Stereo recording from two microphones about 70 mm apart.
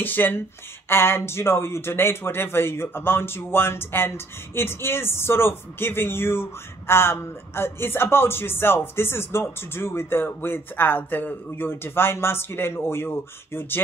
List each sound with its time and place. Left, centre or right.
0.0 s a man's voice: left